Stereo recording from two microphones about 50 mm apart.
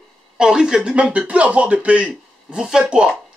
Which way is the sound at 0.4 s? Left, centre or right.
Centre.